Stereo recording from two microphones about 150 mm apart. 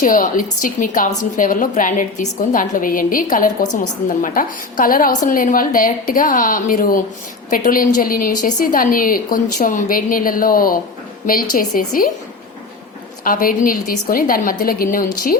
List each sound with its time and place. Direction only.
0.0 s a woman's voice: 60° left (ahead or behind)
13.2 s a woman's voice: 70° left (ahead or behind)